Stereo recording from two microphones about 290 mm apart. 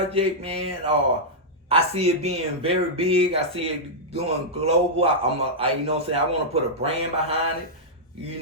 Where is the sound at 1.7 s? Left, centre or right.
Right.